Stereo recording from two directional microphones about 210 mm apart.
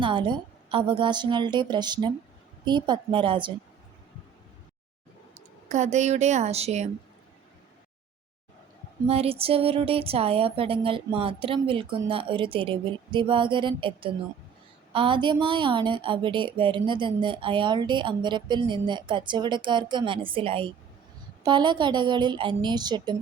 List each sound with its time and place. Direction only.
0.0 s a woman's voice: 25° right (ahead or behind)
5.3 s a woman's voice: 35° right (ahead or behind)
9.0 s a woman's voice: 30° right (ahead or behind)